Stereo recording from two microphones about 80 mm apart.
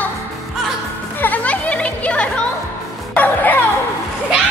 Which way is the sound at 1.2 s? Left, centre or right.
Centre.